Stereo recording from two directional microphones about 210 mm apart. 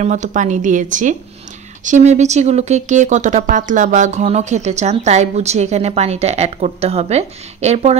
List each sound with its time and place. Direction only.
0.0 s speech: 35° right (ahead or behind)